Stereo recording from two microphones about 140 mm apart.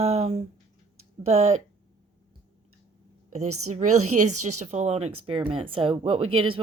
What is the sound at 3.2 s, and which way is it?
A woman's voice, 65° right (ahead or behind).